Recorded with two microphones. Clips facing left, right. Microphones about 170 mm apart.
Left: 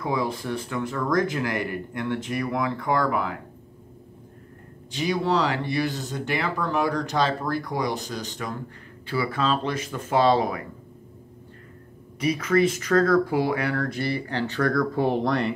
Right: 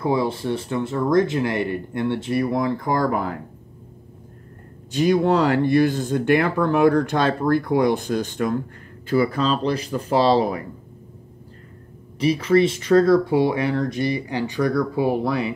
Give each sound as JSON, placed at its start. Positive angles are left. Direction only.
{"t": 0.0, "sound": "speech", "side_deg": -30}
{"t": 4.9, "sound": "speech", "side_deg": -50}
{"t": 9.1, "sound": "speech", "side_deg": -40}
{"t": 12.2, "sound": "speech", "side_deg": -30}